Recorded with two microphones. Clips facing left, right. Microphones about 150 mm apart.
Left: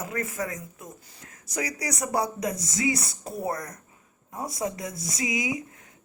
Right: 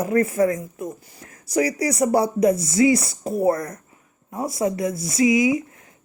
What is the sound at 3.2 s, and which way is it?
Speech, 55° right (ahead or behind).